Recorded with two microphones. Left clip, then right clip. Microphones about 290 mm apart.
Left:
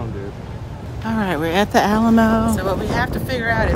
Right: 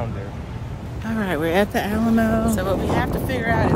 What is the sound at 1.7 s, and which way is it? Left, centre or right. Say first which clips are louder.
Speech: left 6 dB; centre.